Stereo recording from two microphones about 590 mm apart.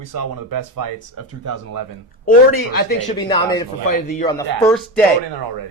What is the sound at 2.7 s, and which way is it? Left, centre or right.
Speech, left.